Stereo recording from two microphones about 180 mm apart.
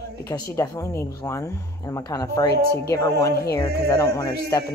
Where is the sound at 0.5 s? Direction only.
20° left (ahead or behind).